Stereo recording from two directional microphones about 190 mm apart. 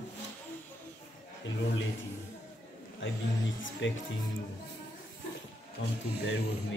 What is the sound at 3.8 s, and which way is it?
Speech, 80° left.